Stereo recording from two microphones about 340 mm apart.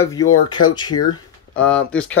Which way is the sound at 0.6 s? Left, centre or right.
Left.